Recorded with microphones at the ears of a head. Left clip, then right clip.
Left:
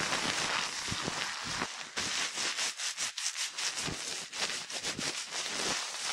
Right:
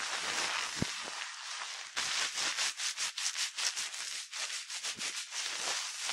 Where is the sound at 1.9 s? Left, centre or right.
Centre.